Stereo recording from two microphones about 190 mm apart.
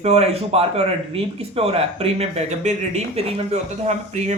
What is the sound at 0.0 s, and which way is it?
Speech, 35° right (ahead or behind).